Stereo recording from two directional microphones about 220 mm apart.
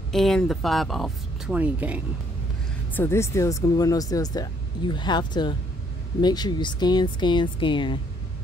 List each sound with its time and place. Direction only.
0.1 s speech: centre (ahead or behind)
2.9 s speech: 10° left (ahead or behind)